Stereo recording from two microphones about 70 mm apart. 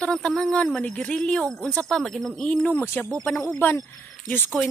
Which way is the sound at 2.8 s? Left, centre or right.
Left.